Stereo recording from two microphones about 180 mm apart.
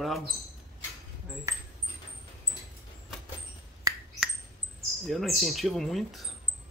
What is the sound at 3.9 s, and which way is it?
Finger snapping, 20° right (ahead or behind).